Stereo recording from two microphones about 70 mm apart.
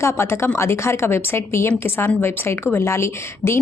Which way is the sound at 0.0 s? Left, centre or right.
Left.